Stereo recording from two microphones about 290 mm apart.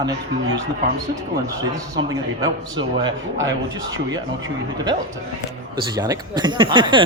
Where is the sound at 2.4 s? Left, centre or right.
Centre.